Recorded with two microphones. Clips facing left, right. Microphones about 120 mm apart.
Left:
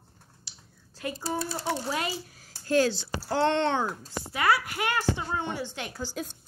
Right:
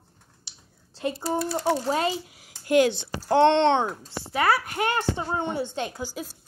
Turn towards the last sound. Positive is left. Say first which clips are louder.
# right 1 dB
turn(degrees=-5)  # may be behind; listen again after turning